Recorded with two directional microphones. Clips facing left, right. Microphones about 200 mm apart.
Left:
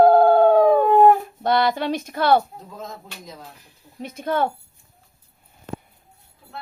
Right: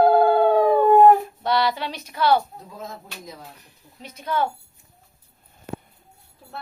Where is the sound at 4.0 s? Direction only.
50° left (ahead or behind).